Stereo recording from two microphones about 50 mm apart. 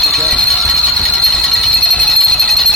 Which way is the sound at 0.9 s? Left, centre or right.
Left.